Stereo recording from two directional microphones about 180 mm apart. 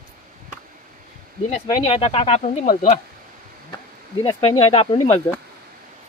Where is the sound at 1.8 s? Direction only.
35° left (ahead or behind).